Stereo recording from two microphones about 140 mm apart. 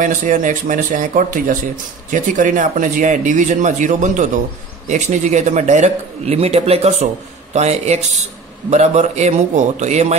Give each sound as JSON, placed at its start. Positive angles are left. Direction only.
{"t": 0.0, "sound": "a man's voice", "side_deg": -70}